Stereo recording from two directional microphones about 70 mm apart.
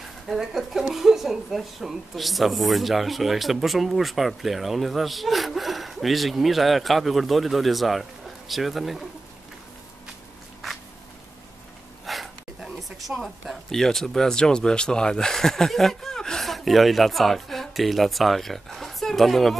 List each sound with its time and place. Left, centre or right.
0.3 s speech: centre
12.1 s a sound: centre
13.2 s speech: centre